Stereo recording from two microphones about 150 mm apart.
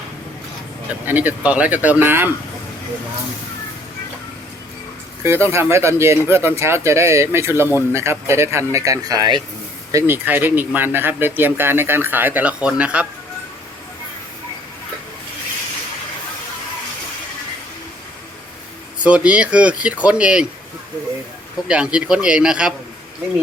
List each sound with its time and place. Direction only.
1.0 s speech: 10° right (ahead or behind)
5.2 s speech: 15° right (ahead or behind)
9.9 s speech: 15° right (ahead or behind)
19.0 s speech: 10° right (ahead or behind)
21.7 s speech: 5° right (ahead or behind)